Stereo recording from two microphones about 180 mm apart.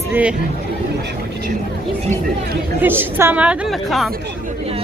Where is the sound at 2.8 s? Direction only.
10° right (ahead or behind).